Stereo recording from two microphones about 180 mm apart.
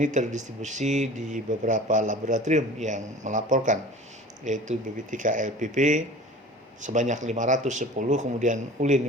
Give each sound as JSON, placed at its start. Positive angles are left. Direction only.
{"t": 0.0, "sound": "speech", "side_deg": -45}